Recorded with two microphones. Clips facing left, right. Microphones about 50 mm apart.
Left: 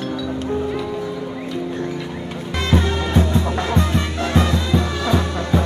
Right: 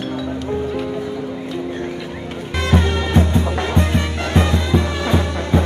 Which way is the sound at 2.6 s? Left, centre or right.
Right.